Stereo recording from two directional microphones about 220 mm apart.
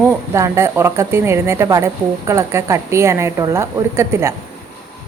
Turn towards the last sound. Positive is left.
turn(degrees=-10)  # may be behind; listen again after turning